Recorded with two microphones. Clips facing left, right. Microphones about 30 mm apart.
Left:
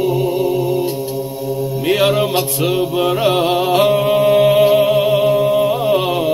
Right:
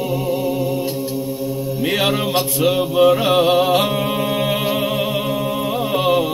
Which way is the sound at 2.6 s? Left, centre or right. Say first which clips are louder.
Right 4 dB; centre.